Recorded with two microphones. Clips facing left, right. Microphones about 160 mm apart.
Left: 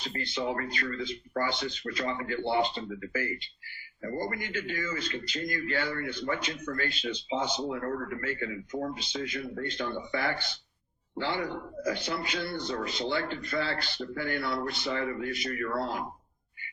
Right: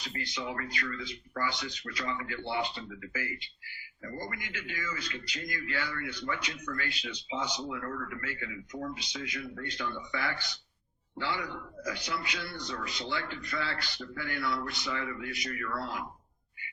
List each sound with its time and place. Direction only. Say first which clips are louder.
0.0 s speech: left 5 dB; 30° left (ahead or behind)
5.0 s speech: left 6 dB; 45° left (ahead or behind); by 10.6 s 30° left (ahead or behind)
11.2 s speech: left 4 dB; 40° left (ahead or behind)
11.9 s a man's voice: left 3 dB; 30° left (ahead or behind)
12.3 s speech: left 6 dB; 40° left (ahead or behind)
12.8 s speech: left 4 dB; 30° left (ahead or behind)